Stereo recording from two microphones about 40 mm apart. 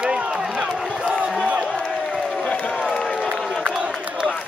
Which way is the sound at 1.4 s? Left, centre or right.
Right.